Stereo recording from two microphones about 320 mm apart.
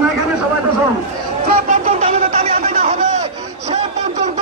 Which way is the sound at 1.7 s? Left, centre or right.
Right.